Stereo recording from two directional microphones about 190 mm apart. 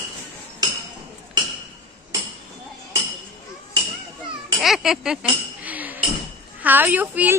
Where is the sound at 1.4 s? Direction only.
25° right (ahead or behind).